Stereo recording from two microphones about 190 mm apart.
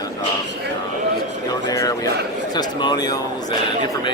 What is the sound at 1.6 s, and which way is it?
Speech, 20° left (ahead or behind).